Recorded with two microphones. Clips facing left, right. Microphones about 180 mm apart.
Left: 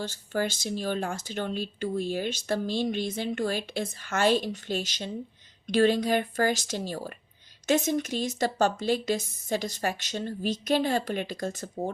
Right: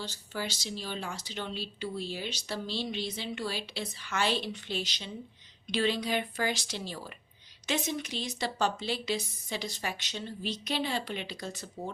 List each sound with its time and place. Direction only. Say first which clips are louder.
0.0 s speech: left 7 dB; 50° left (ahead or behind)